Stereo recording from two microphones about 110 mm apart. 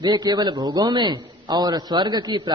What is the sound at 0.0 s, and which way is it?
A woman's voice, 40° right (ahead or behind).